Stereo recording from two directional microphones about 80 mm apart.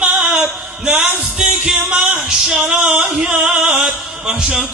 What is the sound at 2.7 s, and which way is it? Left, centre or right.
Music, centre.